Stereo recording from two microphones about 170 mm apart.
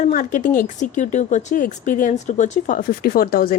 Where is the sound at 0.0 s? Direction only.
50° left (ahead or behind).